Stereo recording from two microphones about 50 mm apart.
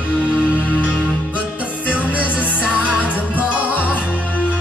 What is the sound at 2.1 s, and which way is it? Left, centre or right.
Music, right.